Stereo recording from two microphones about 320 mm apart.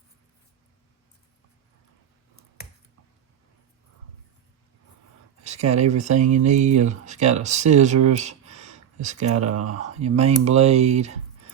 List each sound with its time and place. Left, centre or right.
5.4 s speech: right
8.1 s a sound: right
9.5 s speech: right
9.8 s speech: right